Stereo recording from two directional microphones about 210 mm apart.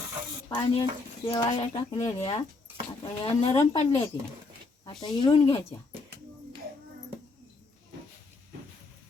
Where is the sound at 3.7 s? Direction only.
30° left (ahead or behind).